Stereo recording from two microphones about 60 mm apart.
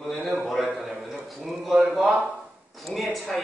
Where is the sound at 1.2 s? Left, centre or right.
Centre.